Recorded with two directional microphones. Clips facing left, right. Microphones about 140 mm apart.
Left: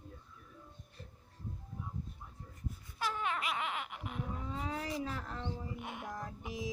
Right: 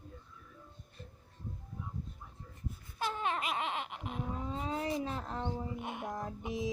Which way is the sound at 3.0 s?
30° right (ahead or behind).